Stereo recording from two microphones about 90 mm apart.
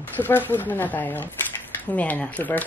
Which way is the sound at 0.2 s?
20° left (ahead or behind).